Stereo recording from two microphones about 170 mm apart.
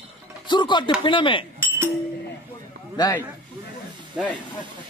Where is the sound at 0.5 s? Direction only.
25° left (ahead or behind).